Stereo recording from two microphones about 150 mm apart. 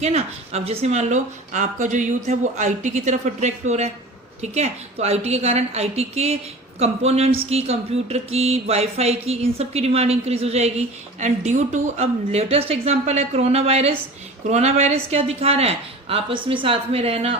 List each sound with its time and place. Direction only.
0.0 s speech: 45° right (ahead or behind)